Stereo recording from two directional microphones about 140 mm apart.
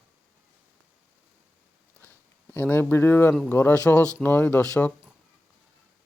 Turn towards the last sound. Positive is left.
turn(degrees=10)  # may be behind; listen again after turning